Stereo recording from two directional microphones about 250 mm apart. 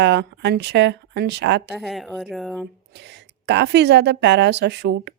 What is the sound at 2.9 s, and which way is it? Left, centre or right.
Speech, right.